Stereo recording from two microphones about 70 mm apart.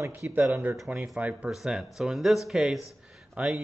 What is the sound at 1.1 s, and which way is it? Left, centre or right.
Speech, right.